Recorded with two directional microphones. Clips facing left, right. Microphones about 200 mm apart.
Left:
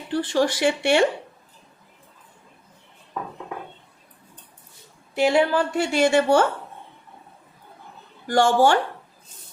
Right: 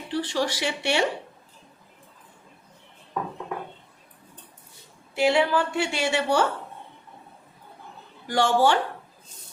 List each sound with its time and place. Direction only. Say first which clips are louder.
0.1 s a woman's voice: left 5 dB; 50° left (ahead or behind)
5.1 s a woman's voice: left 2 dB; 40° left (ahead or behind)
8.3 s a woman's voice: left 3 dB; 45° left (ahead or behind)